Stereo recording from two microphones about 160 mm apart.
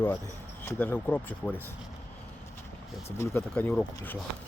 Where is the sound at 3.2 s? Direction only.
15° left (ahead or behind).